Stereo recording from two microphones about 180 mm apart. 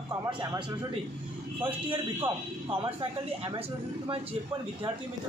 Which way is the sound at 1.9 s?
30° right (ahead or behind).